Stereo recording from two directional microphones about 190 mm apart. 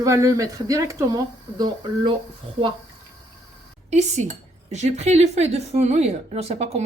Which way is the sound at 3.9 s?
35° right (ahead or behind).